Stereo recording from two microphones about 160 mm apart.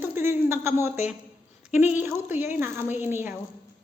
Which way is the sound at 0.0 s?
15° right (ahead or behind).